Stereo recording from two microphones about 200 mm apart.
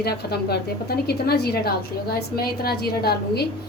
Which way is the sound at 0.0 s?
55° left (ahead or behind).